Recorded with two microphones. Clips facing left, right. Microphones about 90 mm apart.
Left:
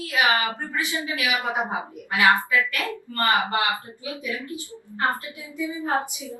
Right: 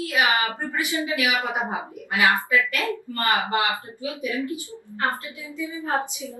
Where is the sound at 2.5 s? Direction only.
20° right (ahead or behind).